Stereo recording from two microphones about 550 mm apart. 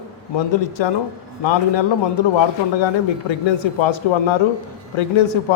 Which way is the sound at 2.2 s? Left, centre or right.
Left.